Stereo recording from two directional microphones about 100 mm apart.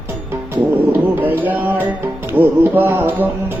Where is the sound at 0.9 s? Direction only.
20° right (ahead or behind).